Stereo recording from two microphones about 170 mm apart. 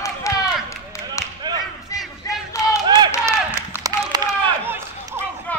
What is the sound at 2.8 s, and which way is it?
Run, 25° right (ahead or behind).